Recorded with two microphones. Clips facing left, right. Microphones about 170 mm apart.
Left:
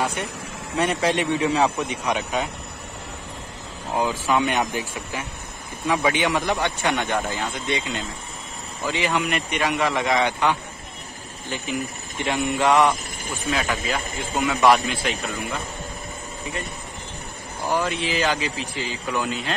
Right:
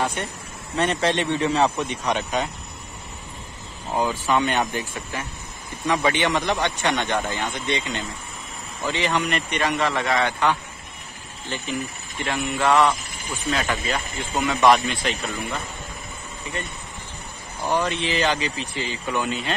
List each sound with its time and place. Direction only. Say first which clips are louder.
0.0 s a man's voice: even; 10° left (ahead or behind)
3.9 s a man's voice: even; 10° left (ahead or behind)
13.2 s speech: left 1 dB; 45° left (ahead or behind)
13.5 s a man's voice: even; 5° left (ahead or behind)
17.6 s a man's voice: right 1 dB; 5° left (ahead or behind)